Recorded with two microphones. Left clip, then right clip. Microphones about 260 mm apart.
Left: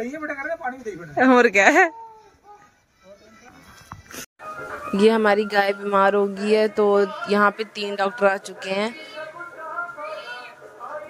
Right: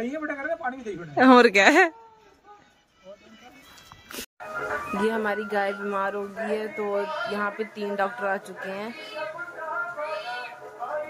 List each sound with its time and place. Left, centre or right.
0.0 s a man's voice: centre
4.9 s speech: left